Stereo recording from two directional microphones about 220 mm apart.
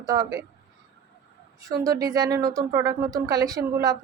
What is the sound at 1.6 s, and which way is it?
A woman's voice, 15° right (ahead or behind).